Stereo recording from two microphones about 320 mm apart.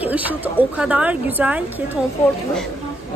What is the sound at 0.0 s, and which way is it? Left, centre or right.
Speech, centre.